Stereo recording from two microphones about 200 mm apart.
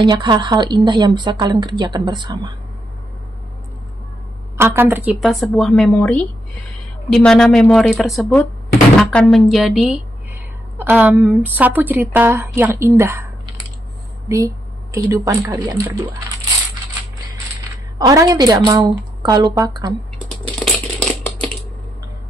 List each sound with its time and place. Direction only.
0.0 s a woman's voice: 20° right (ahead or behind)
4.6 s a woman's voice: 10° right (ahead or behind)
14.3 s speech: 15° right (ahead or behind)
17.9 s a woman's voice: 15° right (ahead or behind)
20.4 s a sound: 5° left (ahead or behind)